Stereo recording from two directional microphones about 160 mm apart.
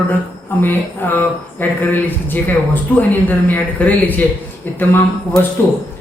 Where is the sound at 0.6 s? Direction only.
10° left (ahead or behind).